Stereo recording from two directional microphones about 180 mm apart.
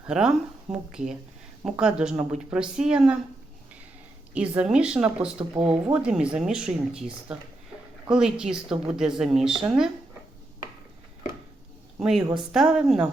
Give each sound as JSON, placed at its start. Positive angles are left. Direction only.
{"t": 0.0, "sound": "speech", "side_deg": -5}
{"t": 4.4, "sound": "speech", "side_deg": -5}
{"t": 5.5, "sound": "speech", "side_deg": -30}
{"t": 5.9, "sound": "speech", "side_deg": -5}
{"t": 11.9, "sound": "a woman's voice", "side_deg": -5}